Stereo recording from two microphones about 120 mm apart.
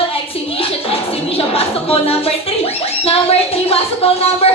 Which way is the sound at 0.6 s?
50° left (ahead or behind).